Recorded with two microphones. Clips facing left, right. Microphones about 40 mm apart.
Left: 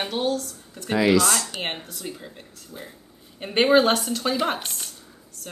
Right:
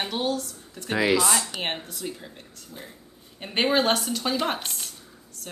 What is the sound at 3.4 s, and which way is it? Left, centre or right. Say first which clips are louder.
A woman's voice: left 5 dB; centre.